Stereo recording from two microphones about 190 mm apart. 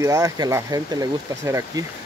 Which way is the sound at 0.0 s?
20° right (ahead or behind).